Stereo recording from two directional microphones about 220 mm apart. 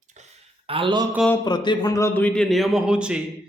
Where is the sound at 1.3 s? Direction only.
20° left (ahead or behind).